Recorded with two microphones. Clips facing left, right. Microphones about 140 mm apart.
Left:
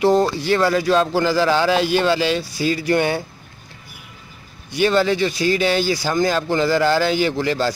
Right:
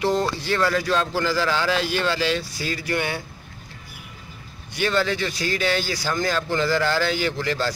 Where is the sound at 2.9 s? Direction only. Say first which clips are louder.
Left 7 dB; 30° left (ahead or behind).